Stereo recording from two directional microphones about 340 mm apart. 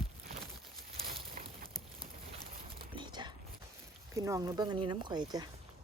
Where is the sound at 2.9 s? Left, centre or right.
Centre.